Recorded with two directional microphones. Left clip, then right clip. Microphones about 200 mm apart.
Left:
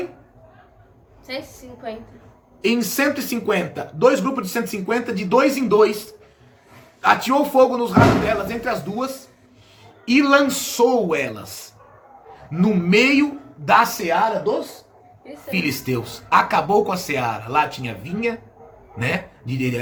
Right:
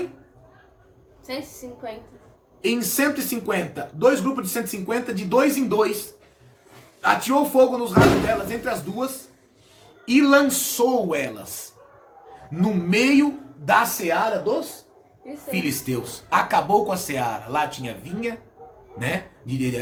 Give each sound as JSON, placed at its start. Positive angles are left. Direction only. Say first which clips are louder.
{"t": 2.6, "sound": "speech", "louder": "left 3 dB", "side_deg": 20}
{"t": 7.0, "sound": "speech", "louder": "left 3 dB", "side_deg": 20}
{"t": 10.1, "sound": "speech", "louder": "left 1 dB", "side_deg": 20}
{"t": 12.5, "sound": "speech", "louder": "left 5 dB", "side_deg": 20}